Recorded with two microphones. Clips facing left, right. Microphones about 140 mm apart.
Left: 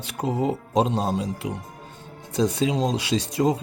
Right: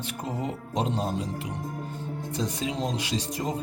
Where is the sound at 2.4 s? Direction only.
90° left.